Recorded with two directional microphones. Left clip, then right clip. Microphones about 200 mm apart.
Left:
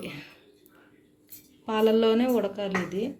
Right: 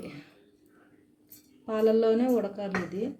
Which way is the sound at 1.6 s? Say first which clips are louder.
Left 2 dB; 10° left (ahead or behind).